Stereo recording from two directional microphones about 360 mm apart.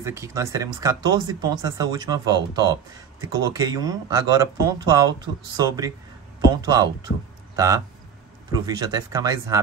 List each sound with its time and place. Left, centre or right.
0.0 s speech: centre